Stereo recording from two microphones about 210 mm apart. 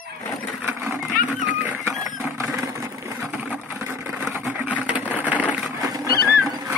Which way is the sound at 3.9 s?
10° right (ahead or behind).